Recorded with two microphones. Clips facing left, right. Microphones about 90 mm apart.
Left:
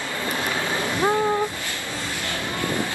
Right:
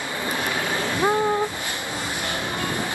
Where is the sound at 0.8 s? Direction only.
20° right (ahead or behind).